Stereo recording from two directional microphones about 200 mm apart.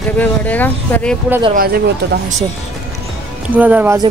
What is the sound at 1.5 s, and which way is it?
Speech, 55° right (ahead or behind).